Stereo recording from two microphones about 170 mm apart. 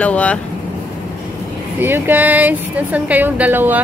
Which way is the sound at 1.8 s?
10° right (ahead or behind).